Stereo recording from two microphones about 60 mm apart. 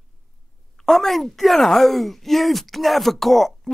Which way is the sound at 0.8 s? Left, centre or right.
Centre.